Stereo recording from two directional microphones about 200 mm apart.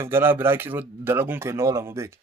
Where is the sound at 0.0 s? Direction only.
10° right (ahead or behind).